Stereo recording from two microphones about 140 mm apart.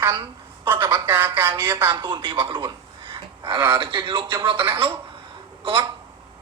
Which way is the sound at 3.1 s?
35° right (ahead or behind).